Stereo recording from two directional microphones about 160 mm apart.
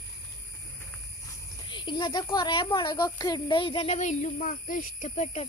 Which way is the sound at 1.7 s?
30° left (ahead or behind).